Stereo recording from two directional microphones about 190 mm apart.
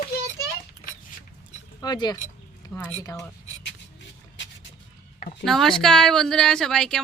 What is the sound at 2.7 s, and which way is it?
Speech, 10° left (ahead or behind).